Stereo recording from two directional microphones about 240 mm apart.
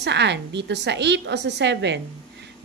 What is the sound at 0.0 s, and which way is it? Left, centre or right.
A woman's voice, right.